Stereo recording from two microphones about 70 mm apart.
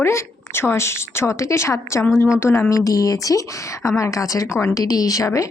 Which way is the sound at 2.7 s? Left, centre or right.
Left.